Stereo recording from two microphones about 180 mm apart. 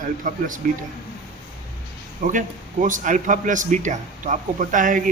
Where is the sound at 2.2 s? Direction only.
45° right (ahead or behind).